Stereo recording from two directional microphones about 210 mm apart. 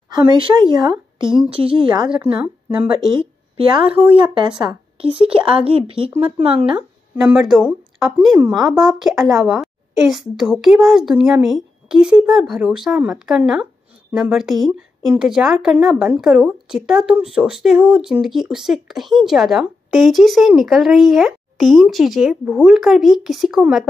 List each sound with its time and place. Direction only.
0.1 s speech: 20° right (ahead or behind)
7.2 s speech: 5° right (ahead or behind)